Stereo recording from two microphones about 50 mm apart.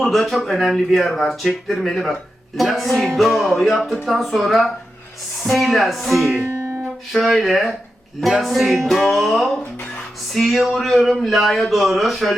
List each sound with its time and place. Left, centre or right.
0.0 s speech: centre
6.3 s music: right
7.1 s speech: centre